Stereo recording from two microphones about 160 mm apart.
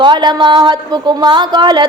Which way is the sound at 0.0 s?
25° right (ahead or behind).